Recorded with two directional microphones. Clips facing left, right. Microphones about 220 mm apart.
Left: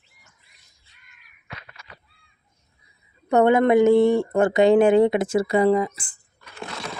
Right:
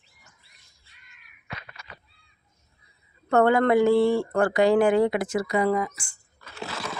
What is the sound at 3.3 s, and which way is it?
Speech, 20° left (ahead or behind).